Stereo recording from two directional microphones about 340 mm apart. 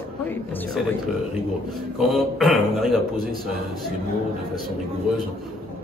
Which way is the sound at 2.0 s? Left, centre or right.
Centre.